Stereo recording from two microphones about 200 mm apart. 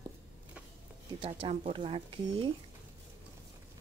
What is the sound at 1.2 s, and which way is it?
Speech, 25° right (ahead or behind).